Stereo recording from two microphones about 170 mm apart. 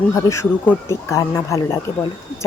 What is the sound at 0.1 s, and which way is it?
Speech, 15° left (ahead or behind).